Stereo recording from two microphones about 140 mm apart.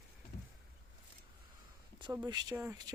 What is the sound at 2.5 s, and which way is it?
Speech, 15° right (ahead or behind).